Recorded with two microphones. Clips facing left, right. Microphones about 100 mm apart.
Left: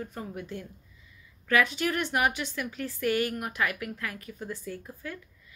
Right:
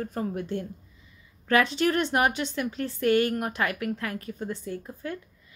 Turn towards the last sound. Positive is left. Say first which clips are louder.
# right 4 dB
turn(degrees=-30)  # may be behind; listen again after turning